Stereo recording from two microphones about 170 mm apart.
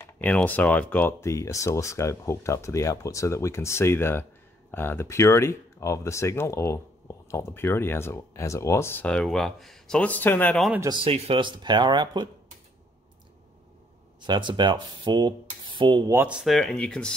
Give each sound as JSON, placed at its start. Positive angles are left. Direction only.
{"t": 0.0, "sound": "speech", "side_deg": 10}
{"t": 11.1, "sound": "speech", "side_deg": -35}
{"t": 14.2, "sound": "speech", "side_deg": -25}
{"t": 16.1, "sound": "speech", "side_deg": -10}